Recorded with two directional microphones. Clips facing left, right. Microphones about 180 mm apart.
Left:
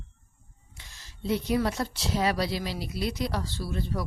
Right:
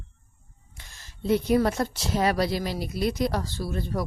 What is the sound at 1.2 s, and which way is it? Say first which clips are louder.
A woman's voice: right 5 dB; 50° right (ahead or behind).